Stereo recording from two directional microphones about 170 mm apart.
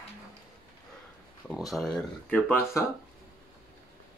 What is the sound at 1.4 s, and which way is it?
Speech, centre (ahead or behind).